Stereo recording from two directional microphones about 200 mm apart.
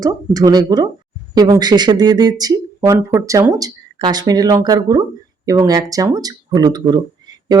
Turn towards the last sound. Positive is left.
turn(degrees=-20)  # may be behind; listen again after turning